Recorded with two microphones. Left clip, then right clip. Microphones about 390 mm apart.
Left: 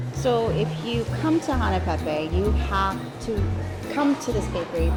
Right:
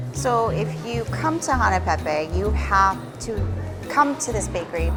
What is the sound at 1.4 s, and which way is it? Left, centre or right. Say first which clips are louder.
Speech: right 5 dB; right.